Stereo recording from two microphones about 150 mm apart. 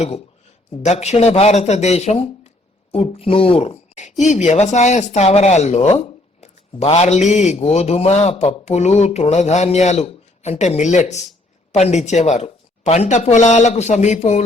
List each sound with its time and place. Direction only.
0.8 s a woman's voice: 50° left (ahead or behind)